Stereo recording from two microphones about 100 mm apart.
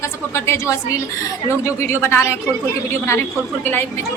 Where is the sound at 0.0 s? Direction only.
30° left (ahead or behind).